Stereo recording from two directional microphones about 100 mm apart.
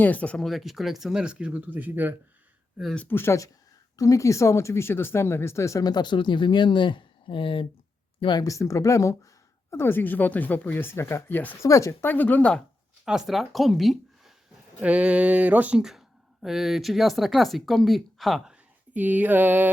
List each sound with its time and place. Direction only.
0.0 s speech: 15° left (ahead or behind)
0.4 s speech: centre (ahead or behind); by 2.1 s 20° right (ahead or behind)
2.9 s speech: 15° left (ahead or behind); by 7.7 s 60° left (ahead or behind)
8.2 s speech: 50° left (ahead or behind)
8.4 s speech: 35° left (ahead or behind)
11.6 s speech: 30° left (ahead or behind); by 12.6 s 10° left (ahead or behind)
13.1 s speech: 5° right (ahead or behind)
14.8 s speech: 10° right (ahead or behind)
15.8 s speech: 5° right (ahead or behind)
18.5 s speech: 15° right (ahead or behind)